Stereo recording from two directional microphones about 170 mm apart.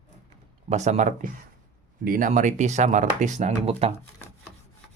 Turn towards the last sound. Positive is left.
turn(degrees=-40)  # may be behind; listen again after turning